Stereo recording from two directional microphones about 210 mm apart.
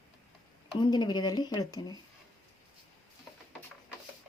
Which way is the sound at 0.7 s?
20° left (ahead or behind).